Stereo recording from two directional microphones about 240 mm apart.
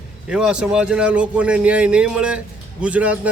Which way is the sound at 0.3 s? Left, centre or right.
Centre.